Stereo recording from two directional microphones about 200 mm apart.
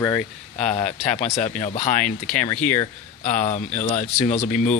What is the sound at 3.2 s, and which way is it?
Speech, 35° left (ahead or behind).